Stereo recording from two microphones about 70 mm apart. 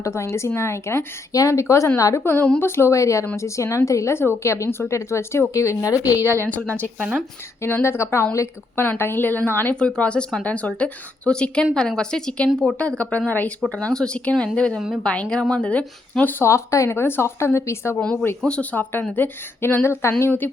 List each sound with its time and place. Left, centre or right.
0.0 s a woman's voice: left
1.3 s a woman's voice: left
2.6 s a woman's voice: left
5.9 s a woman's voice: right
6.5 s speech: left
7.6 s a woman's voice: left
9.7 s speech: centre
13.6 s speech: centre
14.8 s a woman's voice: centre
15.0 s speech: centre
16.4 s a woman's voice: left
18.0 s a woman's voice: centre; by 20.3 s left